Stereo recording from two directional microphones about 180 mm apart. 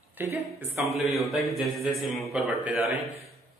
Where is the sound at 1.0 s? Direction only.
Centre (ahead or behind).